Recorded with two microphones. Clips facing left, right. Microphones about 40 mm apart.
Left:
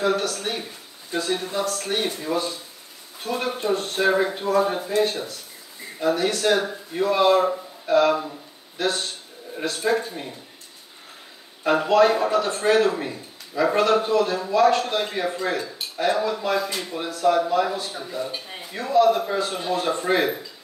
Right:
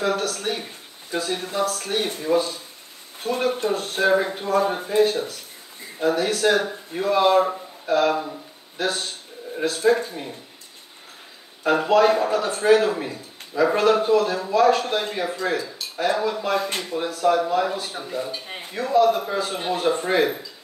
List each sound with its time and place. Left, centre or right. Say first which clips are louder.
0.0 s a man's voice: left 1 dB; centre
3.3 s speech: right 2 dB; right
3.7 s a man's voice: left 2 dB; centre
4.9 s speech: right 3 dB; right
6.0 s a man's voice: right 1 dB; centre
8.3 s a sound: right 3 dB; centre
9.6 s a man's voice: right 3 dB; centre
11.6 s a man's voice: even; centre
16.5 s speech: right 1 dB; right
16.9 s a man's voice: even; centre
18.0 s speech: right 1 dB; centre
18.8 s a man's voice: even; centre